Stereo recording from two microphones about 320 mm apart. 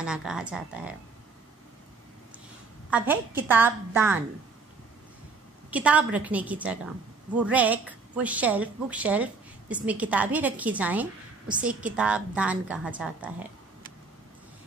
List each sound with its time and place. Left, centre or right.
0.0 s a woman's voice: centre
2.9 s a woman's voice: centre
5.7 s a woman's voice: centre